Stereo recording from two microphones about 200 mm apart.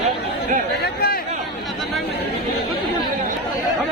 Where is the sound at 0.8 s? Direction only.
50° left (ahead or behind).